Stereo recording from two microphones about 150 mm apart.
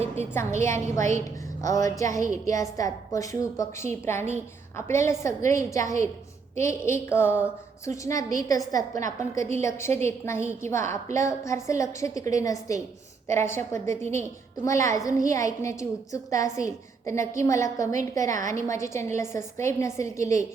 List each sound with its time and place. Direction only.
0.3 s a woman's voice: 15° left (ahead or behind)
6.6 s a sound: 20° left (ahead or behind)
8.0 s a woman's voice: 25° left (ahead or behind)
13.2 s a sound: 15° left (ahead or behind)
14.2 s a woman's voice: 20° left (ahead or behind)
18.3 s a woman's voice: 55° right (ahead or behind)
18.7 s a woman's voice: 20° left (ahead or behind)